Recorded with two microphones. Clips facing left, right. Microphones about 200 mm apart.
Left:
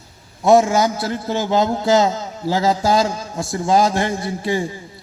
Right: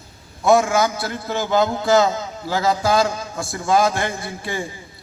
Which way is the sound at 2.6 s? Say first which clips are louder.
Left 1 dB; 35° left (ahead or behind).